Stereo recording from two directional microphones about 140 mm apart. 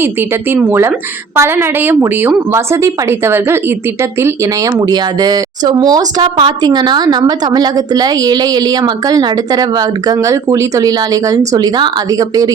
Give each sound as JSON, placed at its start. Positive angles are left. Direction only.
{"t": 0.5, "sound": "a woman's voice", "side_deg": -15}